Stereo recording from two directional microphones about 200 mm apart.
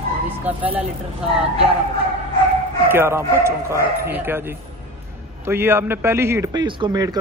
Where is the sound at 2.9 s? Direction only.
10° right (ahead or behind).